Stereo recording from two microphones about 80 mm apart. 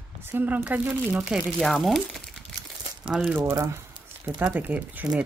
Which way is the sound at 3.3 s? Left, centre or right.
Right.